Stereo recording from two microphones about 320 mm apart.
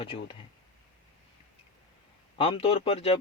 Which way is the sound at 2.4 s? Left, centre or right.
Centre.